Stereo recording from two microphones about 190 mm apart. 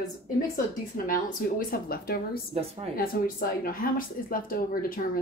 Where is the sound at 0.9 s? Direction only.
45° left (ahead or behind).